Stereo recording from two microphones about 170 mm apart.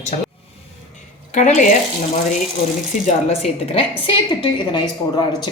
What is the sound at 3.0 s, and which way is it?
A woman's voice, 40° left (ahead or behind).